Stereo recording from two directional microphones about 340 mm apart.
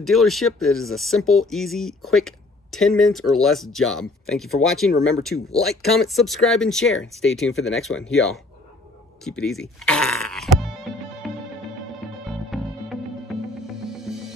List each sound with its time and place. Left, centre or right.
0.0 s speech: centre
9.2 s music: centre